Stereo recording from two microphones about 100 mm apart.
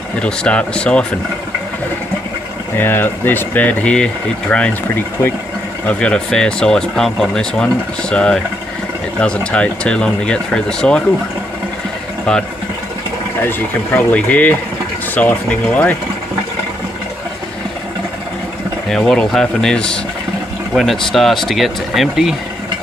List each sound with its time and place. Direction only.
0.2 s speech: 10° left (ahead or behind)
2.8 s speech: 20° left (ahead or behind)
12.3 s speech: 10° left (ahead or behind)
14.1 s speech: 15° left (ahead or behind)
18.9 s speech: 5° left (ahead or behind)